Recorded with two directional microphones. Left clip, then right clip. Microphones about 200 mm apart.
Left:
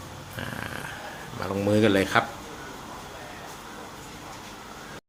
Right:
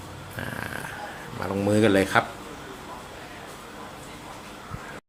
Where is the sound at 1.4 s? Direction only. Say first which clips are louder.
Right 1 dB; centre (ahead or behind).